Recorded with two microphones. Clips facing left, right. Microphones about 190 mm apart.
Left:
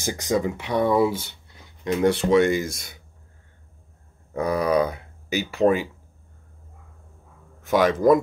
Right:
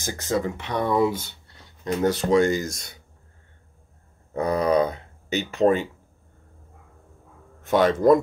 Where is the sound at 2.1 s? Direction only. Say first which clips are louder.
Even; 40° right (ahead or behind).